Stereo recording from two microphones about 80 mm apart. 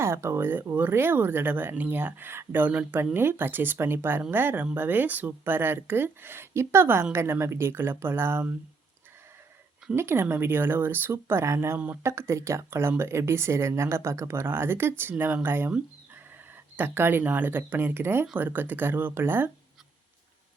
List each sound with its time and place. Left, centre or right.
0.0 s speech: right
9.9 s speech: right
16.7 s speech: right